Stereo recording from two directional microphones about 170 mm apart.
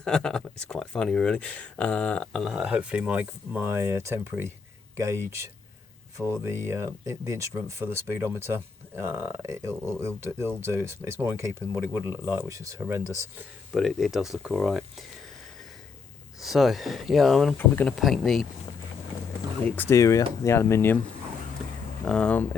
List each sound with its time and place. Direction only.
0.0 s speech: 5° left (ahead or behind); by 13.1 s 15° right (ahead or behind)
13.7 s speech: centre (ahead or behind)
16.4 s speech: centre (ahead or behind)
19.7 s speech: 15° left (ahead or behind)
22.0 s speech: 5° left (ahead or behind)